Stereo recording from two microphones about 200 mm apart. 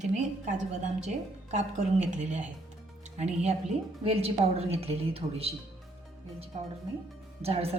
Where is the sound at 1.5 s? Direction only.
35° right (ahead or behind).